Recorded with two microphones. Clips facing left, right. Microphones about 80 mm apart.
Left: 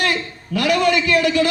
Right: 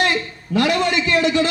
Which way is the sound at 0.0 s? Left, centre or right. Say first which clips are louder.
Right 1 dB; right.